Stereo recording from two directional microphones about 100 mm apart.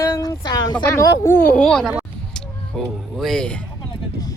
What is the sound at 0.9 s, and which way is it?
Speech, 25° left (ahead or behind).